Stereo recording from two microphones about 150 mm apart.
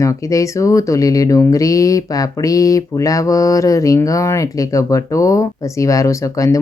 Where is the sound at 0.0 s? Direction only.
20° left (ahead or behind).